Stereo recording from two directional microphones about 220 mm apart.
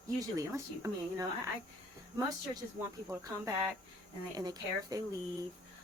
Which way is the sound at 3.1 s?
15° right (ahead or behind).